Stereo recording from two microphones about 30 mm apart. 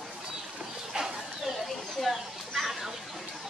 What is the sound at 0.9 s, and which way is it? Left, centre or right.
Bird, right.